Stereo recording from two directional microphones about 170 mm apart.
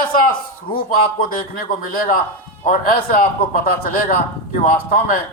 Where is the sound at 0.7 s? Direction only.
30° left (ahead or behind).